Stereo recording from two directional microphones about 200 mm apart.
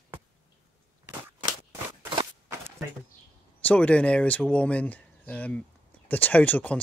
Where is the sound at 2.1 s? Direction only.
25° right (ahead or behind).